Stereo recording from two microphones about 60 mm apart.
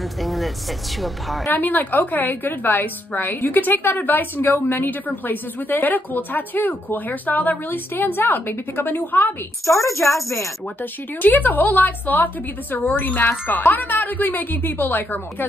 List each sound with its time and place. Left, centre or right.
0.2 s a sound: centre
1.5 s a woman's voice: left
9.7 s a woman's voice: left
10.8 s a woman's voice: left